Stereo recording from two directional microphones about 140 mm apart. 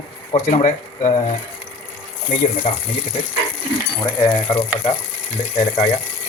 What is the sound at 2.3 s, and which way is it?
Speech, 55° left (ahead or behind).